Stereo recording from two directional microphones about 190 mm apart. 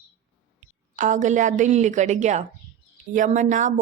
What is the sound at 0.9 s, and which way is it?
A woman's voice, 40° right (ahead or behind).